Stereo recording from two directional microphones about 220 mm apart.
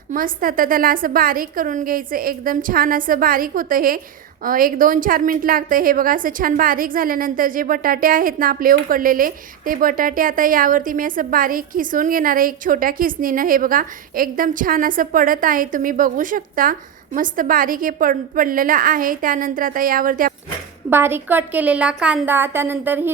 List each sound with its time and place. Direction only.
0.1 s a woman's voice: 40° right (ahead or behind)
20.9 s a woman's voice: 10° right (ahead or behind)